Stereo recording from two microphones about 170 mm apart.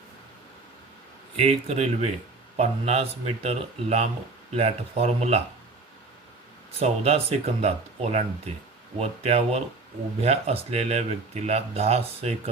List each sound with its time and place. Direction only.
1.4 s speech: 35° right (ahead or behind)
6.7 s speech: 40° right (ahead or behind)